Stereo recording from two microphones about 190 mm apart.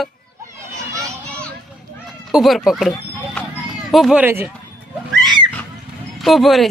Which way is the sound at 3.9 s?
Centre (ahead or behind).